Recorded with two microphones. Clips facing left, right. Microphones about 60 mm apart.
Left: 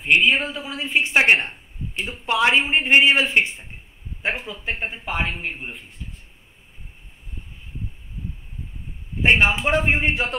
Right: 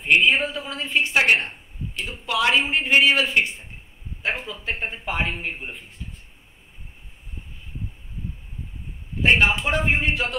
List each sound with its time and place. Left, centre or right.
0.0 s a woman's voice: centre; by 3.6 s left
4.3 s a man's voice: centre
9.2 s a man's voice: left